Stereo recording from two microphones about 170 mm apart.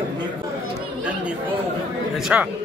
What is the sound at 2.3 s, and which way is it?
Speech, 10° right (ahead or behind).